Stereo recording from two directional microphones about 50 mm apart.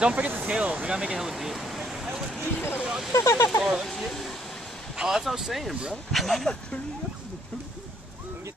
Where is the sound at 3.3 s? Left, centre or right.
Left.